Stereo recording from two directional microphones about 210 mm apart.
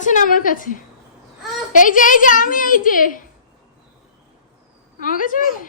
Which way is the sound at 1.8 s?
40° left (ahead or behind).